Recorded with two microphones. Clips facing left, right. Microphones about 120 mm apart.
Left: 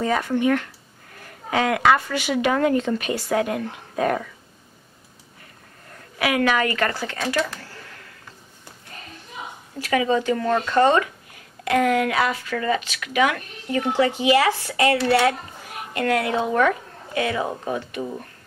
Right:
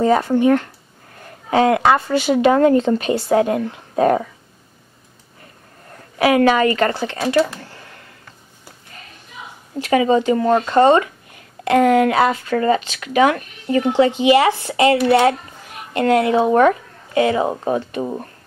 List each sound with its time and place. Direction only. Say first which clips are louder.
0.0 s speech: right 6 dB; 30° right (ahead or behind)
6.1 s speech: right 7 dB; 35° right (ahead or behind)
9.8 s speech: right 6 dB; 25° right (ahead or behind)